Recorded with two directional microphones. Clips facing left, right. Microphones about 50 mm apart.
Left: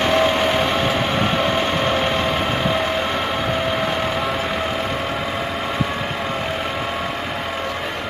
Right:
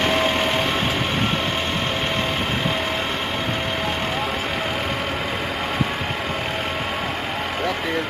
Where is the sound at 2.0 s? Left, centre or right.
Centre.